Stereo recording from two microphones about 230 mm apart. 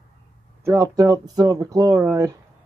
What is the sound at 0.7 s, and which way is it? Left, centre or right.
Speech, centre.